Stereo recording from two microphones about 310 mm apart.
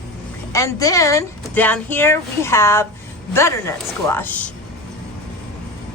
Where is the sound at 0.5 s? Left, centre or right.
Centre.